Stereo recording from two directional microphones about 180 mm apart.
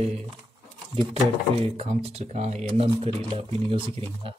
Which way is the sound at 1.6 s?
30° right (ahead or behind).